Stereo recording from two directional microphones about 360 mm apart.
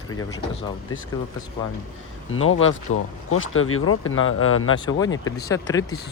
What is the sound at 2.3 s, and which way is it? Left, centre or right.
Speech, left.